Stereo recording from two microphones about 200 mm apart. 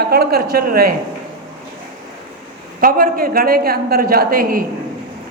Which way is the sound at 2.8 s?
45° right (ahead or behind).